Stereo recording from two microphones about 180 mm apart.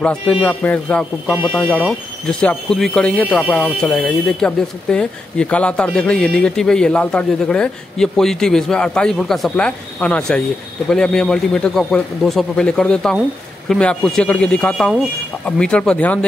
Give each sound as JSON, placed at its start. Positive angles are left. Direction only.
{"t": 0.0, "sound": "a man's voice", "side_deg": 5}